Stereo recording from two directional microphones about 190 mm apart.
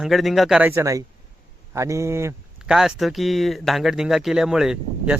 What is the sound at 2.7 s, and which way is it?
Speech, centre (ahead or behind).